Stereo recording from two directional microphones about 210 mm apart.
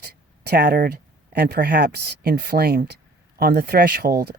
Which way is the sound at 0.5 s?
45° right (ahead or behind).